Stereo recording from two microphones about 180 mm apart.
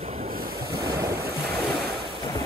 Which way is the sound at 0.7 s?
20° right (ahead or behind).